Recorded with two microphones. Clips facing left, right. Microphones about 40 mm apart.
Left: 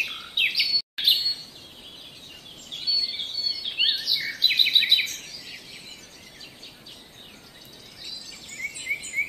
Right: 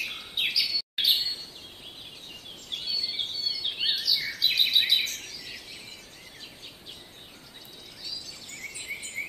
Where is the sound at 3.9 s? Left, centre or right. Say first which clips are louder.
Left 1 dB; left.